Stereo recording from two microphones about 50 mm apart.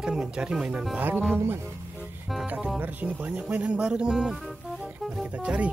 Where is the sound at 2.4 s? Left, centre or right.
Right; by 4.4 s centre.